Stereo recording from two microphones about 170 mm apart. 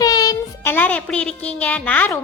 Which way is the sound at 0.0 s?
20° left (ahead or behind).